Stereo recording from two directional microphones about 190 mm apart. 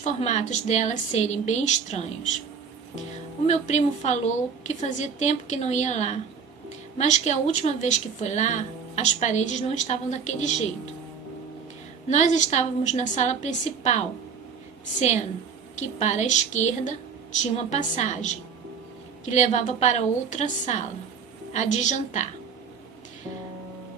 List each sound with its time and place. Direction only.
0.0 s a woman's voice: 35° left (ahead or behind)
3.4 s a woman's voice: 35° left (ahead or behind)
12.0 s a woman's voice: 40° left (ahead or behind)
16.0 s a woman's voice: 40° left (ahead or behind)